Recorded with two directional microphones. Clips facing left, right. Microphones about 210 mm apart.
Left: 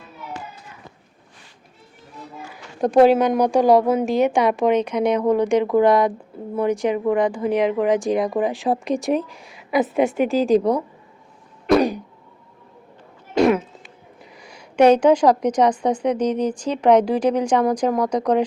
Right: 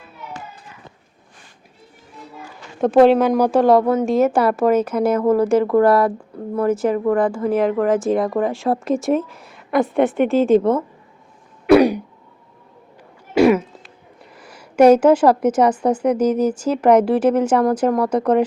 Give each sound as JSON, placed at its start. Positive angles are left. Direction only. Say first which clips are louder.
{"t": 2.8, "sound": "a woman's voice", "louder": "right 2 dB", "side_deg": 0}
{"t": 5.9, "sound": "speech", "louder": "right 1 dB", "side_deg": 15}
{"t": 6.7, "sound": "a woman's voice", "louder": "right 2 dB", "side_deg": 0}
{"t": 13.3, "sound": "a sound", "louder": "right 3 dB", "side_deg": -5}
{"t": 14.3, "sound": "a woman's voice", "louder": "right 3 dB", "side_deg": -5}